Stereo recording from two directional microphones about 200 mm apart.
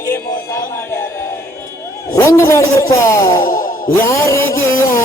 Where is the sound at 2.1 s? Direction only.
15° left (ahead or behind).